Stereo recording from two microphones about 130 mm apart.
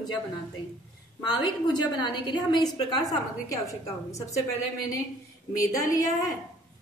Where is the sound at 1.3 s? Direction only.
35° left (ahead or behind).